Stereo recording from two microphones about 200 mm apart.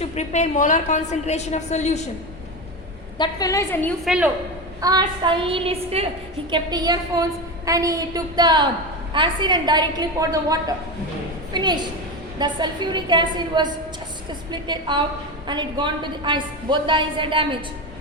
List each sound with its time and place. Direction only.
0.0 s a woman's voice: 35° left (ahead or behind)
3.2 s a woman's voice: 20° left (ahead or behind)
4.0 s a woman's voice: 5° right (ahead or behind)
4.8 s a woman's voice: 20° right (ahead or behind)